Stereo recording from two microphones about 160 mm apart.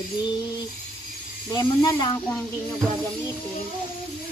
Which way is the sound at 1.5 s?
25° left (ahead or behind).